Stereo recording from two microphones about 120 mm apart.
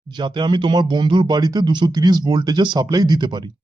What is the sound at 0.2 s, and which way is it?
Speech, 40° right (ahead or behind).